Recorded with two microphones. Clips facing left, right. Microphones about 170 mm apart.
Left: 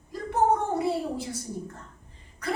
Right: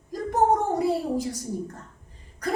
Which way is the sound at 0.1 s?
40° right (ahead or behind).